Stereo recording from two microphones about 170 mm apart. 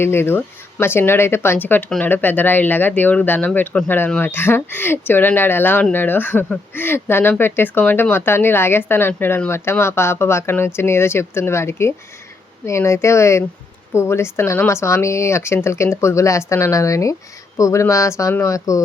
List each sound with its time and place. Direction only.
0.0 s speech: 15° left (ahead or behind)